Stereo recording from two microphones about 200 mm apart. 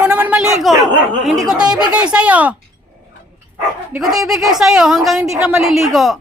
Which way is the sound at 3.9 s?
Centre (ahead or behind).